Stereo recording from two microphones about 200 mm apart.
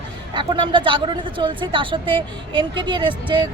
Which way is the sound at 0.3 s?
25° right (ahead or behind).